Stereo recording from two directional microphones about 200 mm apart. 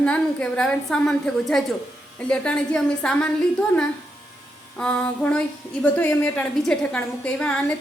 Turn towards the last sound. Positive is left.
turn(degrees=5)  # may be behind; listen again after turning